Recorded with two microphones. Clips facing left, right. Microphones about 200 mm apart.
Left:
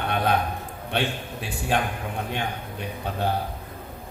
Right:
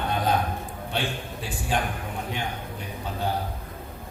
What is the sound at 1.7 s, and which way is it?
Speech, 65° left (ahead or behind).